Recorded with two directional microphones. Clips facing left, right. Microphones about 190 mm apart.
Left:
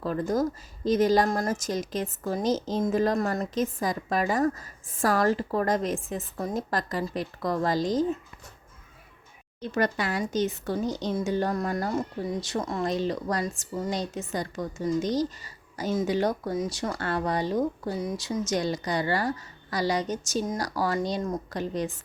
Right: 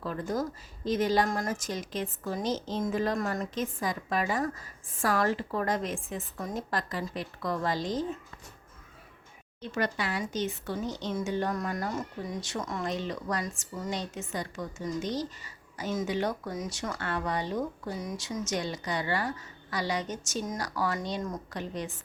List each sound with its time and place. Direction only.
0.0 s speech: 40° left (ahead or behind)
9.6 s speech: 45° left (ahead or behind)